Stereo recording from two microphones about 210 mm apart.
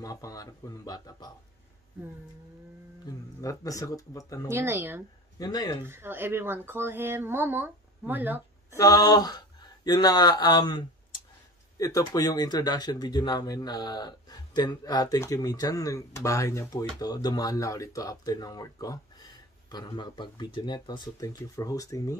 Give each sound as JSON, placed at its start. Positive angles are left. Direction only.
{"t": 0.0, "sound": "speech", "side_deg": 15}
{"t": 3.3, "sound": "speech", "side_deg": 15}
{"t": 4.5, "sound": "speech", "side_deg": -10}
{"t": 5.4, "sound": "speech", "side_deg": 15}
{"t": 5.9, "sound": "speech", "side_deg": -10}
{"t": 8.7, "sound": "speech", "side_deg": 15}